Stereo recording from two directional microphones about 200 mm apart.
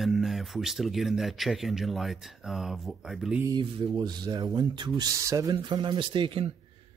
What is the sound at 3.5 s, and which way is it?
Speech, 20° right (ahead or behind).